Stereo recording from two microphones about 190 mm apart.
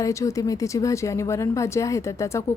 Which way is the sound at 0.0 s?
15° left (ahead or behind).